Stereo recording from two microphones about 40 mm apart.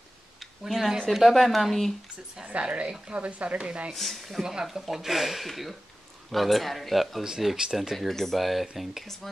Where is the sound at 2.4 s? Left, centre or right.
Right.